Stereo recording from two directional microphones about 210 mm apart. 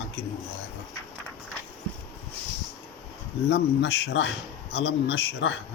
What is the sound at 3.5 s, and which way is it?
Speech, 50° left (ahead or behind).